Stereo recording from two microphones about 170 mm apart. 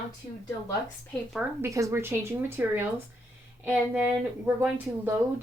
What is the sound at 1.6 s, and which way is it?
A woman's voice, 15° right (ahead or behind).